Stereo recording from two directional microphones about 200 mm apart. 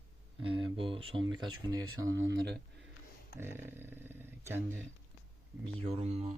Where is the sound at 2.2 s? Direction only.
60° right (ahead or behind).